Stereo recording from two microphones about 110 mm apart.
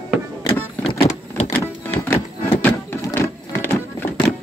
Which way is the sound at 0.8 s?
80° left.